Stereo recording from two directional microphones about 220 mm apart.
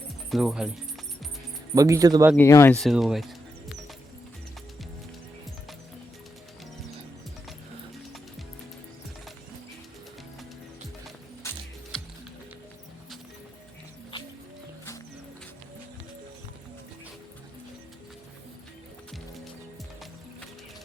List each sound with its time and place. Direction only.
0.3 s speech: centre (ahead or behind)
1.7 s speech: 15° right (ahead or behind)
2.3 s speech: 10° left (ahead or behind)
11.4 s music: 5° left (ahead or behind)